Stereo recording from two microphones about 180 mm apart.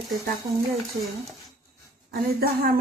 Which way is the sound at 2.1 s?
60° right (ahead or behind).